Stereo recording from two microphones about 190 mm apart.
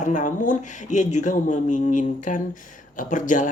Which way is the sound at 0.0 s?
40° left (ahead or behind).